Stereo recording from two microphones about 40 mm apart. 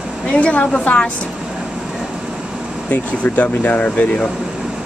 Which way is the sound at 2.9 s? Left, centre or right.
Left.